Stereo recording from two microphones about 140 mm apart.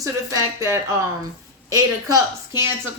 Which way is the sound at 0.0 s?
20° right (ahead or behind).